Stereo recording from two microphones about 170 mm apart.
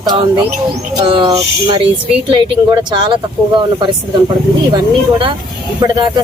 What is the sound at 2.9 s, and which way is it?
Speech, 25° right (ahead or behind).